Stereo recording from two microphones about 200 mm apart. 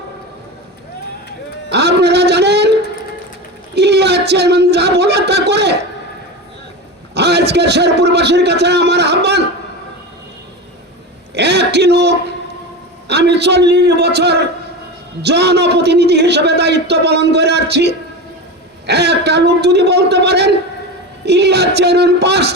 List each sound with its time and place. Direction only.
1.7 s speech: 55° right (ahead or behind)
3.8 s speech: 55° right (ahead or behind)
7.1 s a man's voice: 55° right (ahead or behind)
11.3 s a man's voice: 55° right (ahead or behind)